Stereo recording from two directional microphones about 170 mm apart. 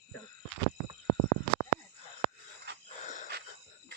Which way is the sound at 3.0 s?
50° left (ahead or behind).